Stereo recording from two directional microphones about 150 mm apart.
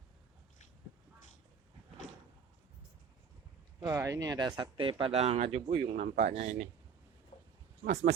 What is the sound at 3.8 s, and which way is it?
Speech, 20° right (ahead or behind).